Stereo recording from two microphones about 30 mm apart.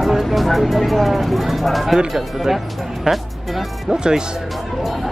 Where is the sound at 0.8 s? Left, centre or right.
Centre.